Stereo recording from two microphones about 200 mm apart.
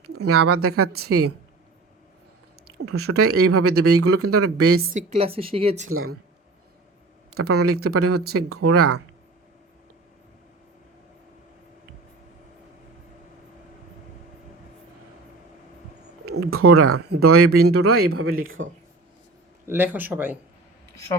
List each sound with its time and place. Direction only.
0.3 s speech: 90° right
2.8 s speech: 90° right
4.8 s a woman's voice: 40° right (ahead or behind)
5.9 s speech: 90° right
7.3 s speech: 90° right
16.5 s speech: 90° right
19.6 s speech: 10° right (ahead or behind)